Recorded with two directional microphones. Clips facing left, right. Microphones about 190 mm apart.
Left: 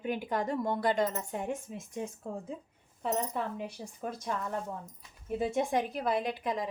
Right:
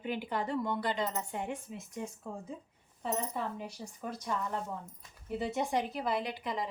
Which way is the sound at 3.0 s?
55° left (ahead or behind).